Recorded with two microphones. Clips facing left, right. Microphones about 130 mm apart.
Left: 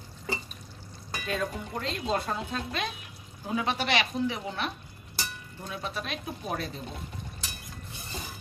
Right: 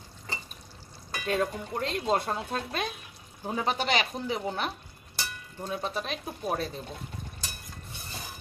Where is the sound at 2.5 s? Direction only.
45° right (ahead or behind).